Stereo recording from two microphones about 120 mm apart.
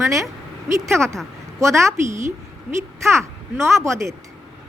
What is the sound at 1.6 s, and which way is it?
Speech, 25° right (ahead or behind).